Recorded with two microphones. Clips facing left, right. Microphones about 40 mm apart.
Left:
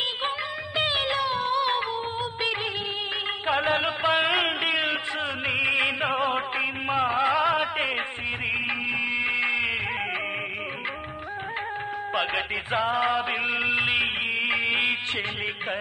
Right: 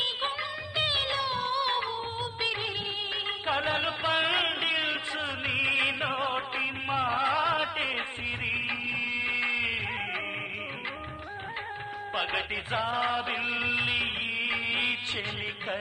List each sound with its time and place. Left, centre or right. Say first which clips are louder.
0.7 s music: left 4 dB; left
3.7 s a sound: left 5 dB; left
5.5 s music: left 3 dB; left
6.0 s music: left 5 dB; left
9.1 s music: left 3 dB; left
12.4 s music: left 4 dB; left
13.7 s music: left 5 dB; left
14.5 s music: left 5 dB; left